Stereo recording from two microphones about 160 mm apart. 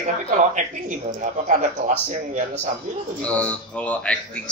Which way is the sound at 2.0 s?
45° right (ahead or behind).